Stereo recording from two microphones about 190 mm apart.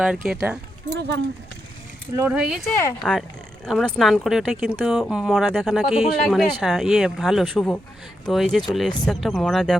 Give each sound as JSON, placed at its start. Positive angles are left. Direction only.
{"t": 0.0, "sound": "speech", "side_deg": -5}
{"t": 0.9, "sound": "speech", "side_deg": -65}
{"t": 2.1, "sound": "speech", "side_deg": -10}